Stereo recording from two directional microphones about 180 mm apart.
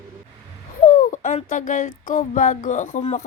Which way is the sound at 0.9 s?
45° left (ahead or behind).